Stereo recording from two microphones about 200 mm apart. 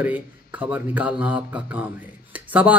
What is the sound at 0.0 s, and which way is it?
A man's voice, 5° right (ahead or behind).